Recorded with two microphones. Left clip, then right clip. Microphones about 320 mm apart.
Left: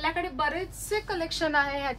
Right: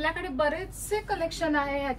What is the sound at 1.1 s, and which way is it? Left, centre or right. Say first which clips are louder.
Speech: right 1 dB; centre.